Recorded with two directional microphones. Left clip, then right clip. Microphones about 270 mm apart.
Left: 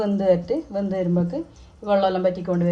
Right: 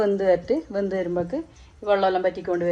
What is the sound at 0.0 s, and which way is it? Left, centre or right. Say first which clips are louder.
Speech: even; right.